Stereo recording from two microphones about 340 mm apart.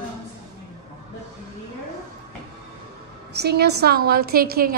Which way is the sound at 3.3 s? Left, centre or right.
Right.